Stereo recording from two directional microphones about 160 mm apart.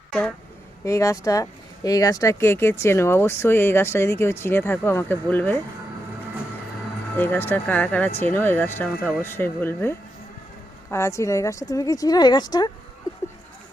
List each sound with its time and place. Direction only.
0.1 s speech: 5° left (ahead or behind)
0.9 s speech: 20° left (ahead or behind)
7.2 s speech: 10° left (ahead or behind)
10.9 s a woman's voice: 15° left (ahead or behind)